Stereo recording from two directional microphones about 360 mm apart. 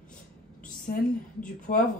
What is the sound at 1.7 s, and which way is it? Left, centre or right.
Speech, left.